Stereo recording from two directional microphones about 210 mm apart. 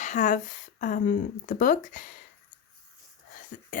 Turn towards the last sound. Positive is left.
turn(degrees=40)  # may be behind; listen again after turning